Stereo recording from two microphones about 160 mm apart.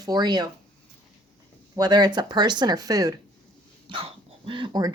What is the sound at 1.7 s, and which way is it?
Speech, 25° right (ahead or behind).